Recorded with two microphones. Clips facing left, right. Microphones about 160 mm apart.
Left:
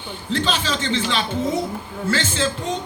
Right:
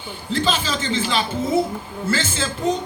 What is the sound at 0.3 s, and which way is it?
A man's voice, 5° right (ahead or behind).